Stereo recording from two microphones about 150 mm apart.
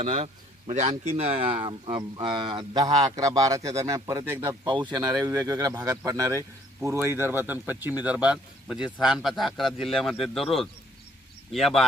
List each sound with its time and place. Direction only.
0.0 s speech: 50° right (ahead or behind); by 4.5 s 15° right (ahead or behind)
4.9 s a man's voice: 25° right (ahead or behind); by 11.9 s centre (ahead or behind)